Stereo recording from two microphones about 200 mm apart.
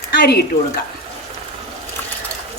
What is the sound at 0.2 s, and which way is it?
Speech, 55° left (ahead or behind).